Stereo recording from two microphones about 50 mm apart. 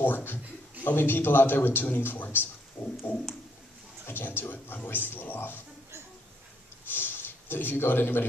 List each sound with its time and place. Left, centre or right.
0.0 s a man's voice: left
3.1 s a sound: left
4.1 s a man's voice: left
6.9 s a man's voice: left